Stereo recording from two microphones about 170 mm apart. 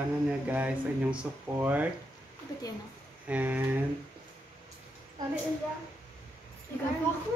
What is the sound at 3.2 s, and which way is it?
Speech, 10° right (ahead or behind).